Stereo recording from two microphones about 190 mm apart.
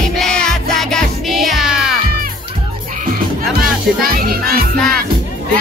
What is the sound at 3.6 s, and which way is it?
Music, 50° right (ahead or behind).